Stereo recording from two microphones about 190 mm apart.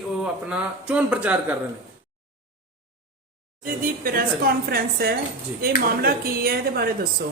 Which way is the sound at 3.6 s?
45° right (ahead or behind).